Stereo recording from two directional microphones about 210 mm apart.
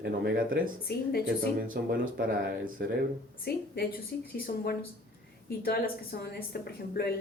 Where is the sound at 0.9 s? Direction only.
50° left (ahead or behind).